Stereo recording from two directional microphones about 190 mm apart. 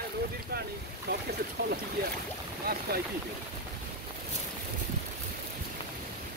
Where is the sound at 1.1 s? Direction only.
60° right (ahead or behind).